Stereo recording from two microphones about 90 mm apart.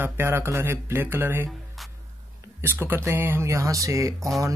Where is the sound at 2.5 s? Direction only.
25° right (ahead or behind).